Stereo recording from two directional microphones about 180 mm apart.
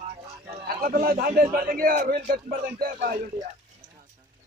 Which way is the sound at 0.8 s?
55° right (ahead or behind).